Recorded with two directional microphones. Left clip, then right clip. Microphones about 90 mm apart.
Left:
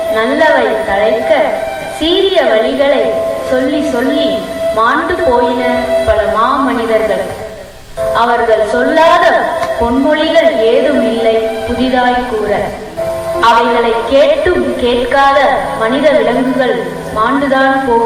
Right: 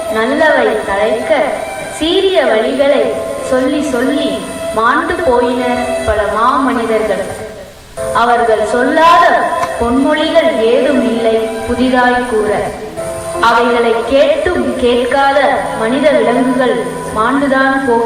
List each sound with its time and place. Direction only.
0.1 s speech: 30° right (ahead or behind)
8.7 s a woman's voice: 30° right (ahead or behind)